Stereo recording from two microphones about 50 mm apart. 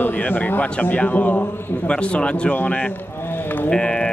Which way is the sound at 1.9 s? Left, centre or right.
Left.